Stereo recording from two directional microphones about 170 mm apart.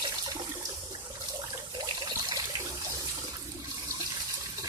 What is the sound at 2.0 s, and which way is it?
Water, 25° right (ahead or behind).